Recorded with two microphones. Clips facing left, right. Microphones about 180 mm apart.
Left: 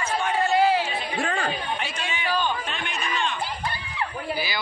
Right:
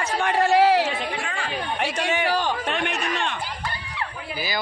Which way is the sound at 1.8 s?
70° right (ahead or behind).